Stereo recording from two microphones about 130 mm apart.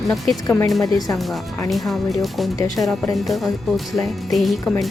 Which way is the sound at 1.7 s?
Centre (ahead or behind).